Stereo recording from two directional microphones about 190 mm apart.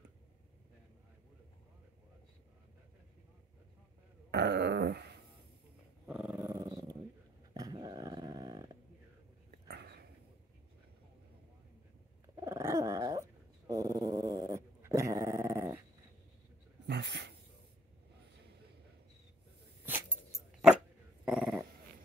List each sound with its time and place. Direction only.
4.3 s dog: 60° right (ahead or behind)
6.0 s dog: 5° right (ahead or behind)
9.7 s a sound: 60° right (ahead or behind)
12.4 s dog: 15° right (ahead or behind)
16.8 s dog: 65° right (ahead or behind)
21.3 s dog: 5° right (ahead or behind)